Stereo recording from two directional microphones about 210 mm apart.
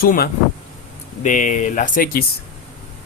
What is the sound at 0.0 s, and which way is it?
Speech, 45° left (ahead or behind).